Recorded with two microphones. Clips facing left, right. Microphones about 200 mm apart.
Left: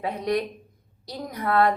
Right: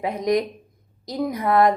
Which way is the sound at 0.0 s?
15° right (ahead or behind).